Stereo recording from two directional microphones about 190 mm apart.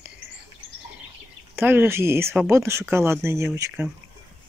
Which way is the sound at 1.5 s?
10° right (ahead or behind).